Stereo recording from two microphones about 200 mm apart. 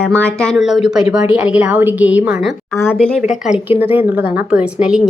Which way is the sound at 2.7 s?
10° left (ahead or behind).